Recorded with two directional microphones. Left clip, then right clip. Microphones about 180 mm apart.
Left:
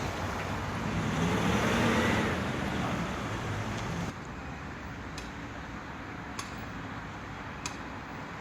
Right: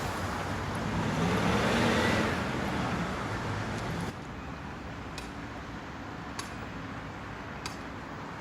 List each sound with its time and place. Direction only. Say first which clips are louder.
1.2 s vehicle: right 1 dB; 45° left (ahead or behind)